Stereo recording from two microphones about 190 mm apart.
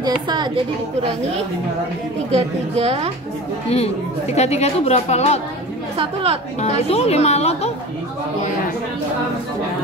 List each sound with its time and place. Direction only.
0.0 s a woman's voice: 25° right (ahead or behind)
2.8 s a woman's voice: 30° right (ahead or behind)
3.7 s speech: 35° left (ahead or behind)
5.9 s a woman's voice: 30° right (ahead or behind)
6.6 s speech: 35° left (ahead or behind)